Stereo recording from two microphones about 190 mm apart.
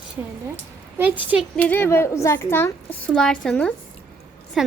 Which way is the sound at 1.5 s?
10° left (ahead or behind).